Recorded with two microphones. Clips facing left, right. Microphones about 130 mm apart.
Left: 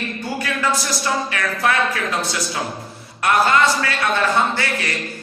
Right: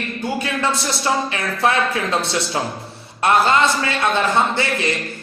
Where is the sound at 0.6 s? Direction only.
25° right (ahead or behind).